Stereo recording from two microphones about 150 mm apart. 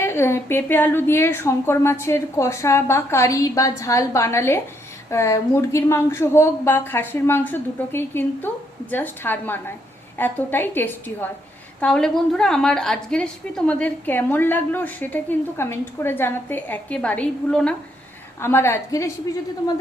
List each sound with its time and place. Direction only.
0.0 s a woman's voice: 15° left (ahead or behind)
18.3 s a woman's voice: 15° left (ahead or behind)